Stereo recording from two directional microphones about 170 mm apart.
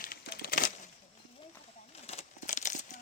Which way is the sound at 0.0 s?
65° left (ahead or behind).